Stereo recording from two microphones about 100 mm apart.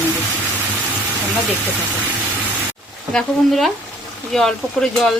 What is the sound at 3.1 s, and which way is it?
Speech, centre (ahead or behind).